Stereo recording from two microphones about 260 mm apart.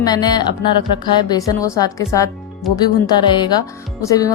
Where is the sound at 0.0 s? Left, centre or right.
Centre.